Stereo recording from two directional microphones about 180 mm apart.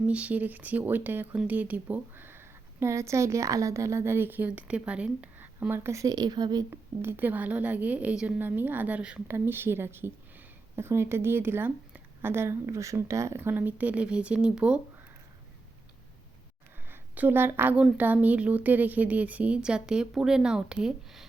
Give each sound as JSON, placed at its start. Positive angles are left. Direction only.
{"t": 0.1, "sound": "speech", "side_deg": -5}
{"t": 16.9, "sound": "speech", "side_deg": -10}